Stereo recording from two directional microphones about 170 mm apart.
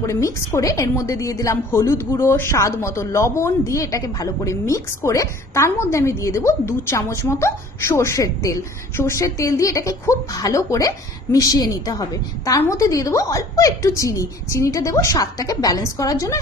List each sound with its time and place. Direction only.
0.0 s a woman's voice: 15° left (ahead or behind)